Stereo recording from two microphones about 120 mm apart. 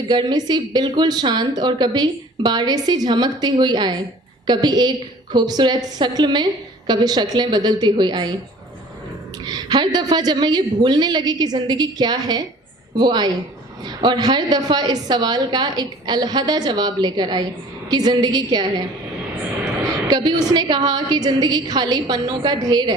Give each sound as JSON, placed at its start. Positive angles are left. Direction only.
{"t": 0.1, "sound": "a woman's voice", "side_deg": -35}
{"t": 9.5, "sound": "a woman's voice", "side_deg": -35}
{"t": 19.8, "sound": "a woman's voice", "side_deg": -35}